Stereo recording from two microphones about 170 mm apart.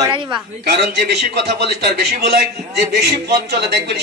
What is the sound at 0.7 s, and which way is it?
A man's voice, 75° right (ahead or behind).